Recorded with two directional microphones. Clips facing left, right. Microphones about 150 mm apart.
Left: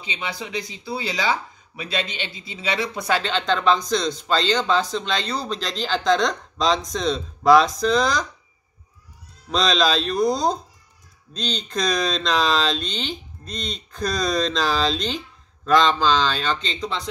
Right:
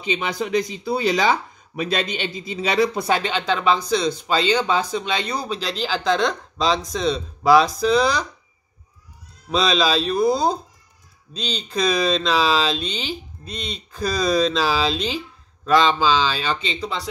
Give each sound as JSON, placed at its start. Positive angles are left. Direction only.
{"t": 0.2, "sound": "speech", "side_deg": -50}
{"t": 3.1, "sound": "speech", "side_deg": -15}
{"t": 9.5, "sound": "speech", "side_deg": -5}